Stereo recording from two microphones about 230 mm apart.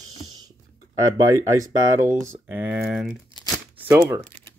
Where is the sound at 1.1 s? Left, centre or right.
Centre.